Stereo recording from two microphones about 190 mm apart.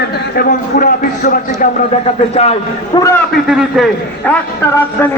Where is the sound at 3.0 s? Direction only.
10° left (ahead or behind).